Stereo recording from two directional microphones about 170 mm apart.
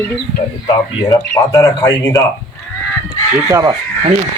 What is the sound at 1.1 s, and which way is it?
A man's voice, 20° left (ahead or behind).